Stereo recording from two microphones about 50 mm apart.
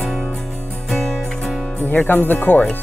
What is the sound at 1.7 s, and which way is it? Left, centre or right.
Speech, left.